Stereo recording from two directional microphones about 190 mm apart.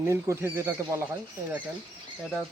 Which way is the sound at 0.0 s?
15° right (ahead or behind).